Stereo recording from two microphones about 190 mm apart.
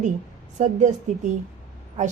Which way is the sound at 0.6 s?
40° right (ahead or behind).